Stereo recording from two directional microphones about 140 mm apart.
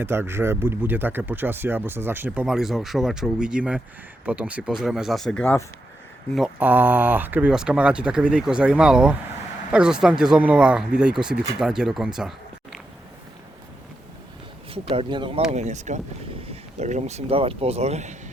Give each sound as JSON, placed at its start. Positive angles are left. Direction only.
{"t": 0.0, "sound": "speech", "side_deg": -15}
{"t": 6.3, "sound": "speech", "side_deg": -10}
{"t": 14.7, "sound": "speech", "side_deg": -40}
{"t": 15.5, "sound": "speech", "side_deg": -55}